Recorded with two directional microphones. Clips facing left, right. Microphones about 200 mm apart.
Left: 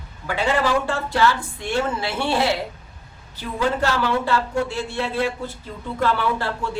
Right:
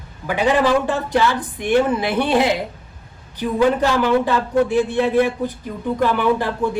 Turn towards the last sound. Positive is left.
turn(degrees=-15)  # may be behind; listen again after turning